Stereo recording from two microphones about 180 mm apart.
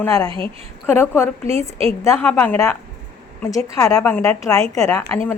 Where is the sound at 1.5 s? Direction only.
35° right (ahead or behind).